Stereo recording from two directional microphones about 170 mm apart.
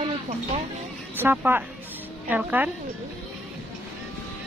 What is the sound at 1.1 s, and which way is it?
A woman's voice, 10° right (ahead or behind).